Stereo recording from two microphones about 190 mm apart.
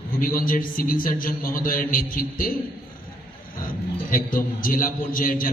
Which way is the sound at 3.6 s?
45° left (ahead or behind).